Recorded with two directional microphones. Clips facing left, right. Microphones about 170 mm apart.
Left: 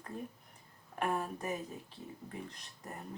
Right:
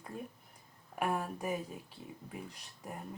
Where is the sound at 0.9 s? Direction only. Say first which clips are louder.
Even; 10° right (ahead or behind).